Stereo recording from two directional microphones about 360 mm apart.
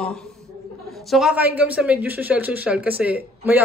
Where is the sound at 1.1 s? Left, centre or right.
Centre.